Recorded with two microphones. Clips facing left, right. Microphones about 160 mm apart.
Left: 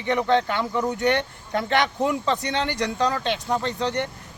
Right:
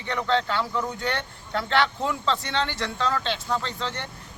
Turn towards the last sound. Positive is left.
turn(degrees=20)  # may be behind; listen again after turning